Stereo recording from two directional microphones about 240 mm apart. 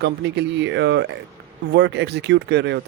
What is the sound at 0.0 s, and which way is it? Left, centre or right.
Speech, right.